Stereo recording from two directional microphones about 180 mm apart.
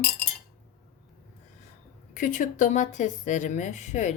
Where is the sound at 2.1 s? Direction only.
45° left (ahead or behind).